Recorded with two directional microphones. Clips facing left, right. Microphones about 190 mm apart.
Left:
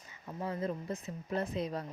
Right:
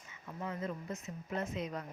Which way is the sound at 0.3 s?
30° left (ahead or behind).